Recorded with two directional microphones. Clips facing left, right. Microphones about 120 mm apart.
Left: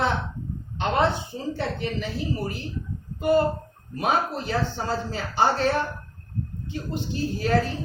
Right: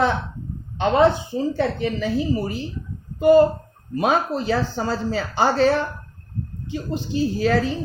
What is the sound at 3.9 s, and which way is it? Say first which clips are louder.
Speech: right 4 dB; 90° right.